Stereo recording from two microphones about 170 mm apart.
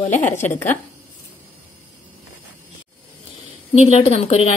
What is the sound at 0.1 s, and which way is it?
Speech, 45° left (ahead or behind).